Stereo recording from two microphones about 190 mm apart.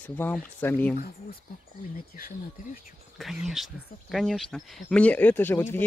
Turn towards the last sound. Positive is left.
turn(degrees=10)  # may be behind; listen again after turning